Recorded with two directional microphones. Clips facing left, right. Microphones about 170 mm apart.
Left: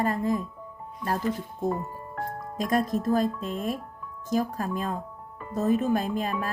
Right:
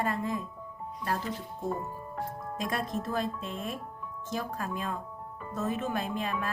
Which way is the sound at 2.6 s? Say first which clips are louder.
Left 8 dB; 40° left (ahead or behind).